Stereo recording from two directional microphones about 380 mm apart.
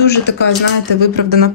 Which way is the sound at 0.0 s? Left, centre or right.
Left.